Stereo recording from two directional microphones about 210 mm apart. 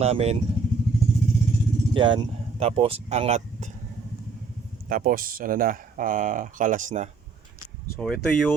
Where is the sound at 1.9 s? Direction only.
25° right (ahead or behind).